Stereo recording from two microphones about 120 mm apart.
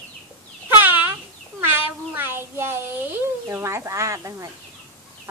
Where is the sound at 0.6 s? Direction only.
15° right (ahead or behind).